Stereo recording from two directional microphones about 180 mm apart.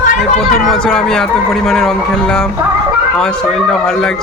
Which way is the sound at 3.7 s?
Centre (ahead or behind).